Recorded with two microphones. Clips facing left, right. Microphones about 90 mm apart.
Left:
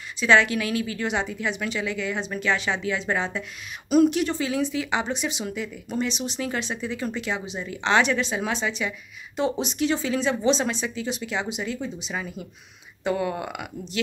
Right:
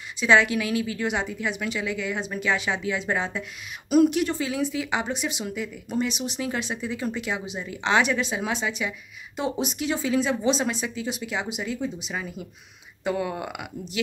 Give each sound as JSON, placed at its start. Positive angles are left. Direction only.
{"t": 0.2, "sound": "speech", "side_deg": -10}